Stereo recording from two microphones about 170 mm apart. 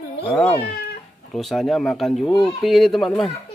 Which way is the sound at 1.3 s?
Centre (ahead or behind).